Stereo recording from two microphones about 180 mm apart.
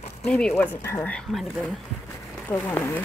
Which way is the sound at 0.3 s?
5° left (ahead or behind).